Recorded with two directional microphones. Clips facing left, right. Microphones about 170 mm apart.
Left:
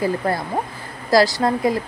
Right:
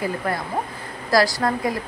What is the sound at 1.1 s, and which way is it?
Speech, 25° left (ahead or behind).